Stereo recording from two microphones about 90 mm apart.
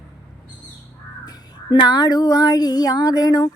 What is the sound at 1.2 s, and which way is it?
Female singing, 50° left (ahead or behind).